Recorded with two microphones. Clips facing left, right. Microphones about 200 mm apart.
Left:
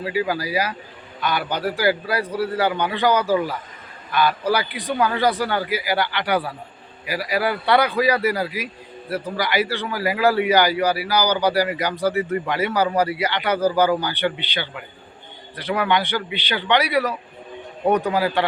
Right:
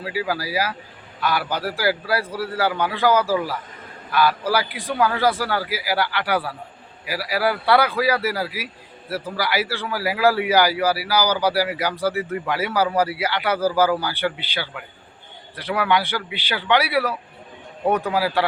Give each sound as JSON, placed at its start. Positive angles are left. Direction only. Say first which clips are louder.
{"t": 0.0, "sound": "a man's voice", "louder": "left 2 dB", "side_deg": -5}